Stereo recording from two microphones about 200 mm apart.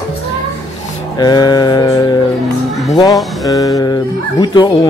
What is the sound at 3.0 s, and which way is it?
Speech, 15° left (ahead or behind).